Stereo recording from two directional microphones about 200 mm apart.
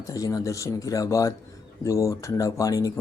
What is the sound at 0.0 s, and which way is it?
Speech, 15° left (ahead or behind).